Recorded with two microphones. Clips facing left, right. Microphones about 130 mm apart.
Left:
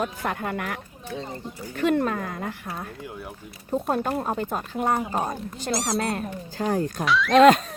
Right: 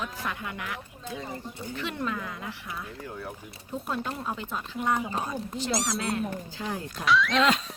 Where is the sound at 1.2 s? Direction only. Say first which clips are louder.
Left 2 dB; 25° left (ahead or behind).